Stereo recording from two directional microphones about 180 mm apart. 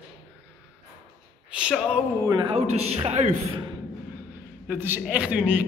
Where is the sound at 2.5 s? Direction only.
35° right (ahead or behind).